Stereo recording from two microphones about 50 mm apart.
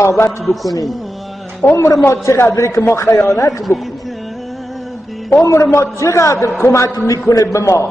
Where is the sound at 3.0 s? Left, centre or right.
Left.